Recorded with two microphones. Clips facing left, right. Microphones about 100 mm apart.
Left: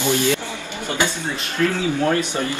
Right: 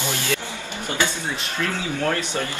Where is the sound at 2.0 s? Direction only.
15° left (ahead or behind).